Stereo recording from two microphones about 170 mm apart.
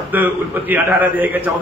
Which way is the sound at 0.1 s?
10° right (ahead or behind).